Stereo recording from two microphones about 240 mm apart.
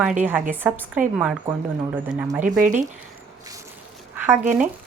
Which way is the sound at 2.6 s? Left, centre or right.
Right.